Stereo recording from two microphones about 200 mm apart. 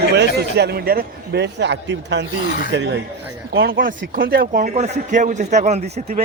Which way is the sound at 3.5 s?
50° right (ahead or behind).